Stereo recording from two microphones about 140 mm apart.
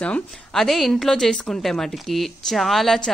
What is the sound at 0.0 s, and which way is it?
Speech, 5° left (ahead or behind).